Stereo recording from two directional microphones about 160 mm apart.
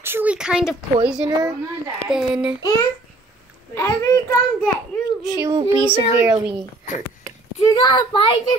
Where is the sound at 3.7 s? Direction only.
15° left (ahead or behind).